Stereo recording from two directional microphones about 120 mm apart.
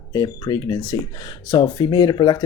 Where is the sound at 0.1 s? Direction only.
35° left (ahead or behind).